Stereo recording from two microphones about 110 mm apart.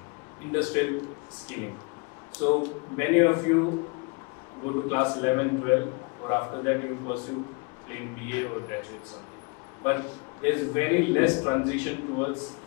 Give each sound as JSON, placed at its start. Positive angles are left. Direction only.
{"t": 0.5, "sound": "a man's voice", "side_deg": 25}
{"t": 2.5, "sound": "a man's voice", "side_deg": 25}
{"t": 4.8, "sound": "a man's voice", "side_deg": 25}
{"t": 9.8, "sound": "a man's voice", "side_deg": 25}